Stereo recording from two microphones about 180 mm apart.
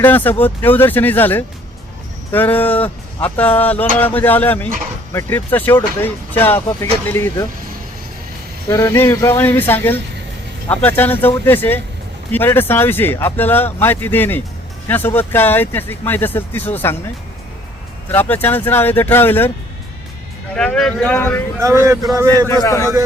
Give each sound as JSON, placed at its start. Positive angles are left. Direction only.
{"t": 0.0, "sound": "speech", "side_deg": 10}
{"t": 8.7, "sound": "speech", "side_deg": 15}
{"t": 18.1, "sound": "speech", "side_deg": 10}
{"t": 20.6, "sound": "speech", "side_deg": 5}
{"t": 22.1, "sound": "speech", "side_deg": -20}
{"t": 22.4, "sound": "speech", "side_deg": 15}